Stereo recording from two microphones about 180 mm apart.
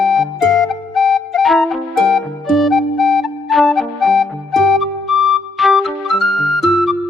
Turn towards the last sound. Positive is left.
turn(degrees=0)  # may be behind; listen again after turning